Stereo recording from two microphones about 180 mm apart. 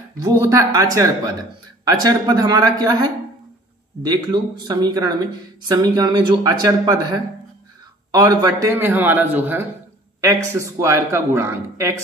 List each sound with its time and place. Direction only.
0.2 s a man's voice: 20° right (ahead or behind)